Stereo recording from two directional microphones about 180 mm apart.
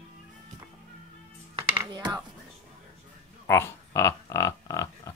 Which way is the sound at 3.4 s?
15° left (ahead or behind).